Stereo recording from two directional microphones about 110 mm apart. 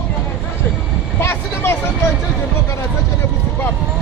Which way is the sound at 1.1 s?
20° left (ahead or behind).